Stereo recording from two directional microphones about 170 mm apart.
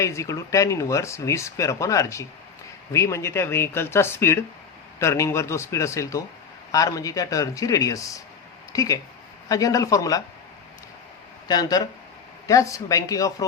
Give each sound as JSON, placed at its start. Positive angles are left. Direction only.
{"t": 0.0, "sound": "speech", "side_deg": 15}
{"t": 11.4, "sound": "speech", "side_deg": 25}